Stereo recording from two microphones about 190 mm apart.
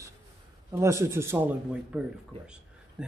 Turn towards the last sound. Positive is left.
turn(degrees=-5)  # may be behind; listen again after turning